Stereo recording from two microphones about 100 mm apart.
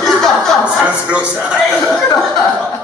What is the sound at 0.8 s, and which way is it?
Speech, 10° right (ahead or behind).